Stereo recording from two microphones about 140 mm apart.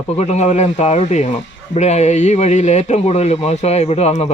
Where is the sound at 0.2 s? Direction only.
55° left (ahead or behind).